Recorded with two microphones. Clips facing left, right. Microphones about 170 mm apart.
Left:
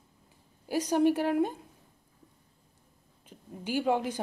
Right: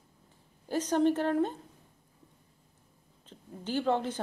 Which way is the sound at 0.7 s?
10° left (ahead or behind).